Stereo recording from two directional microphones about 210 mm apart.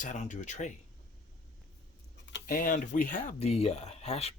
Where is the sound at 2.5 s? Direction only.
40° left (ahead or behind).